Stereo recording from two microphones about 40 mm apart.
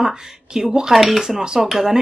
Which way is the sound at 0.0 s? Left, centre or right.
Centre.